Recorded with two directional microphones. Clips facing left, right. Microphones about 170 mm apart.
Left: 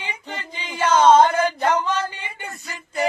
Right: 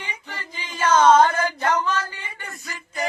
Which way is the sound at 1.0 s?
25° left (ahead or behind).